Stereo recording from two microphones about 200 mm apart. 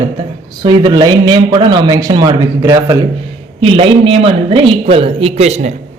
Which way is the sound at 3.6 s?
30° right (ahead or behind).